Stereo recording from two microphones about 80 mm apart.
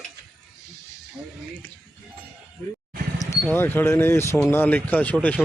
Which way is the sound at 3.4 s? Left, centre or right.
Left.